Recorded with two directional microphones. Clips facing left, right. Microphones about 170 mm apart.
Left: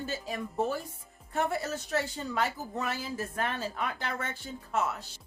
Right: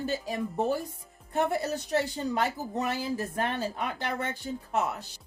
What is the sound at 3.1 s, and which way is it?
A man's voice, 25° right (ahead or behind).